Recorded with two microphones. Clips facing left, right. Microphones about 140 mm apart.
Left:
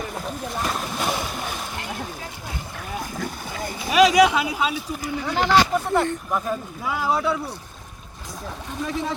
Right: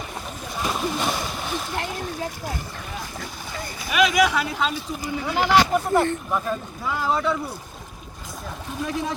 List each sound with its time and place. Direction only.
0.6 s a sound: centre (ahead or behind)
3.8 s a sound: 35° left (ahead or behind)
4.3 s speech: 15° left (ahead or behind)
5.2 s speech: 5° right (ahead or behind)
6.1 s speech: 10° left (ahead or behind)
8.8 s speech: 5° right (ahead or behind)